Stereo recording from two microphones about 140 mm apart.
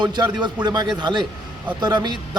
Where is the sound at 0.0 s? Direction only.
30° right (ahead or behind).